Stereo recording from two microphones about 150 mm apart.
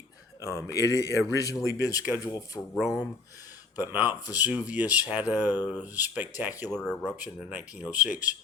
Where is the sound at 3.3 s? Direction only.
25° left (ahead or behind).